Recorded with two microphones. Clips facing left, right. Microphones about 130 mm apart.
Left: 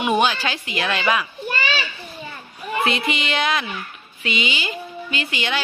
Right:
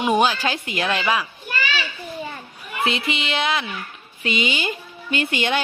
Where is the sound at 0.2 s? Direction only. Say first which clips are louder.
Right 1 dB; 40° right (ahead or behind).